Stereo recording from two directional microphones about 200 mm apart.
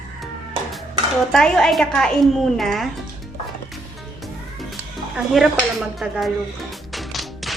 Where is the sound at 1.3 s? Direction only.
5° left (ahead or behind).